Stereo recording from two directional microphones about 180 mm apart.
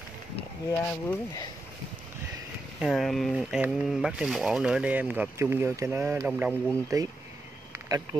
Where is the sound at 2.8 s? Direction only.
Centre (ahead or behind).